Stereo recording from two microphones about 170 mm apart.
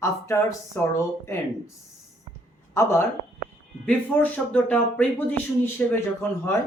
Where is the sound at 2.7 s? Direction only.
15° left (ahead or behind).